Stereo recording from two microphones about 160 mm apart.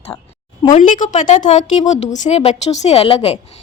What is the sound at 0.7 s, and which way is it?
A woman's voice, 55° left (ahead or behind).